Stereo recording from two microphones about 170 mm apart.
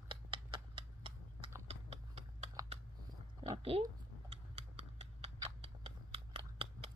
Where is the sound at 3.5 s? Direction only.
35° right (ahead or behind).